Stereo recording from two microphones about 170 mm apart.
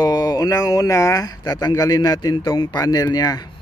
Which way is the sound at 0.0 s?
25° left (ahead or behind).